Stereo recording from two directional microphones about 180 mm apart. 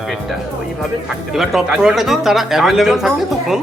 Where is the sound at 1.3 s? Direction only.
Centre (ahead or behind).